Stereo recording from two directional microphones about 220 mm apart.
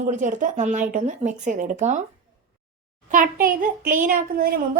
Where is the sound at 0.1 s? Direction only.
35° right (ahead or behind).